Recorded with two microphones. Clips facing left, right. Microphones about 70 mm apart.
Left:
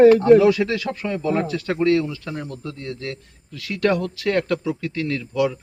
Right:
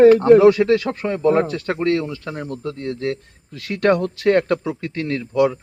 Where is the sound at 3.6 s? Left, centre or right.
Right.